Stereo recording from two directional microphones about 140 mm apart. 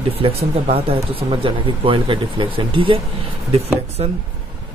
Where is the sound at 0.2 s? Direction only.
45° right (ahead or behind).